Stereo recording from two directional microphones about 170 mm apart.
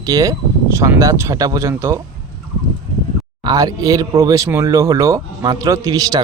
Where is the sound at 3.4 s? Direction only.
25° right (ahead or behind).